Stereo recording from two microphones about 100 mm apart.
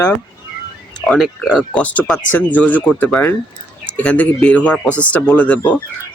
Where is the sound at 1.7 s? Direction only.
15° left (ahead or behind).